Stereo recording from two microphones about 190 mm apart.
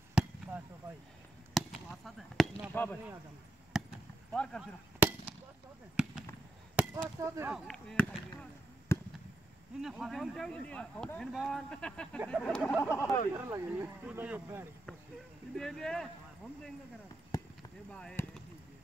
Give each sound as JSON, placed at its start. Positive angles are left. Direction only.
{"t": 0.1, "sound": "chop", "side_deg": -5}
{"t": 1.5, "sound": "a sound", "side_deg": 0}
{"t": 2.7, "sound": "speech", "side_deg": 10}
{"t": 3.7, "sound": "basketball bounce", "side_deg": 0}
{"t": 4.3, "sound": "speech", "side_deg": 5}
{"t": 5.0, "sound": "chop", "side_deg": -10}
{"t": 6.0, "sound": "speech", "side_deg": -5}
{"t": 6.7, "sound": "chop", "side_deg": -10}
{"t": 7.5, "sound": "speech", "side_deg": 0}
{"t": 13.3, "sound": "speech", "side_deg": -15}
{"t": 15.5, "sound": "speech", "side_deg": 5}
{"t": 17.3, "sound": "a sound", "side_deg": 20}
{"t": 17.9, "sound": "speech", "side_deg": 5}